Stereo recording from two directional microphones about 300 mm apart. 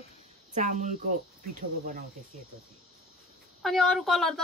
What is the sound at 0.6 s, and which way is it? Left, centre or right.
Speech, right.